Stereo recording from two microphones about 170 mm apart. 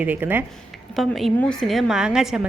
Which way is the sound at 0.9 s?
Centre (ahead or behind).